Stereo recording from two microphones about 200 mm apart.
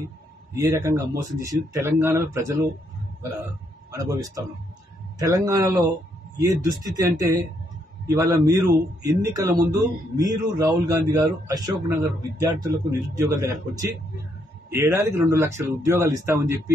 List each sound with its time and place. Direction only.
0.6 s a man's voice: 15° right (ahead or behind)
3.9 s a man's voice: 15° right (ahead or behind)